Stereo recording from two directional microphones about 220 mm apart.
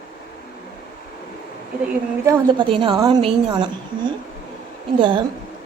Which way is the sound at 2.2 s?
20° right (ahead or behind).